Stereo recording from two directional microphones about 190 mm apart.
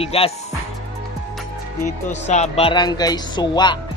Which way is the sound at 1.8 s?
35° left (ahead or behind).